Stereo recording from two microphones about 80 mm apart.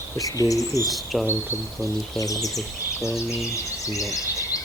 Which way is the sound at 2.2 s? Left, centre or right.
Left.